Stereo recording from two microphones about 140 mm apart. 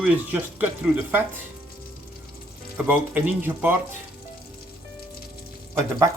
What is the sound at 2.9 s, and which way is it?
Speech, 10° right (ahead or behind).